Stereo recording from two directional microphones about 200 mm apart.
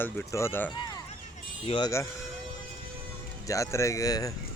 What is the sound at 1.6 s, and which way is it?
Speech, 25° left (ahead or behind).